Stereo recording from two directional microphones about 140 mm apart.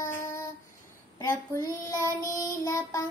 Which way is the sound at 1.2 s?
20° left (ahead or behind).